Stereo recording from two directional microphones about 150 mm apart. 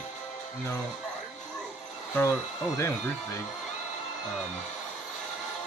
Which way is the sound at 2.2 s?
15° left (ahead or behind).